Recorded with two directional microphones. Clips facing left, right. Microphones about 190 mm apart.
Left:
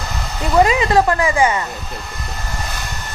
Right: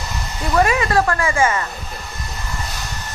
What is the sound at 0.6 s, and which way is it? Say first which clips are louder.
Speech: left 3 dB; 20° left (ahead or behind).